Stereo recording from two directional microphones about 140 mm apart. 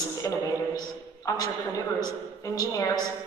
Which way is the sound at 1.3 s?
25° left (ahead or behind).